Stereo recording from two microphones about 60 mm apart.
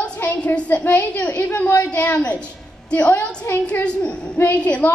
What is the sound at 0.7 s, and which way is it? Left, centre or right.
A woman's voice, left.